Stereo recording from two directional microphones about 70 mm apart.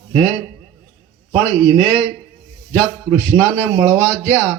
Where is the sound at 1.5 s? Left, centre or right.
Right.